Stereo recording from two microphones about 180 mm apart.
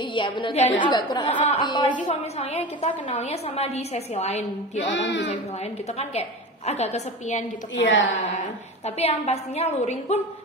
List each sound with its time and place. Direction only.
0.0 s a woman's voice: 25° left (ahead or behind)
2.0 s a woman's voice: 35° left (ahead or behind)
4.8 s speech: 75° left (ahead or behind)
5.6 s a woman's voice: 35° left (ahead or behind)
7.7 s a woman's voice: 90° left
8.4 s a woman's voice: 35° left (ahead or behind)